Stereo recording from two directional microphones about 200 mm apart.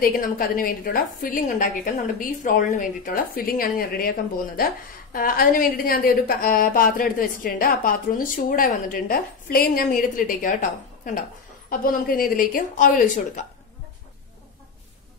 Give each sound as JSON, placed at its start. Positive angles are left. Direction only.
{"t": 0.0, "sound": "a woman's voice", "side_deg": 45}